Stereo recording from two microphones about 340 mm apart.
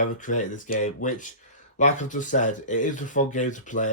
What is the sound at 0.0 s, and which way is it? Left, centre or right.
Speech, left.